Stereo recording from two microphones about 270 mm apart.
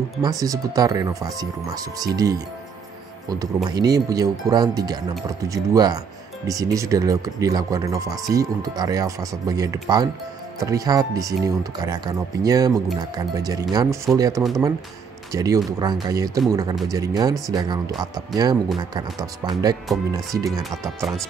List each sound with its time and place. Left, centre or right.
0.2 s speech: centre